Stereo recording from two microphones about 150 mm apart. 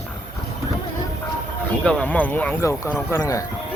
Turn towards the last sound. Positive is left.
turn(degrees=20)  # may be behind; listen again after turning